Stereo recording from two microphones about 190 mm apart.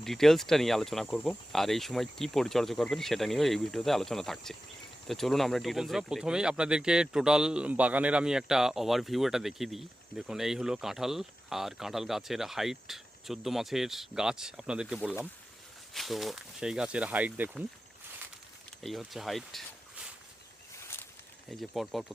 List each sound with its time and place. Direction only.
0.0 s speech: centre (ahead or behind)
16.0 s speech: centre (ahead or behind)
18.8 s speech: centre (ahead or behind)
20.9 s a sound: 10° left (ahead or behind)
21.5 s speech: centre (ahead or behind)